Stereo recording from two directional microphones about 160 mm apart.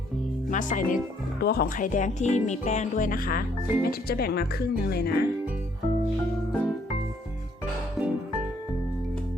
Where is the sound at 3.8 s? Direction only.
75° left (ahead or behind).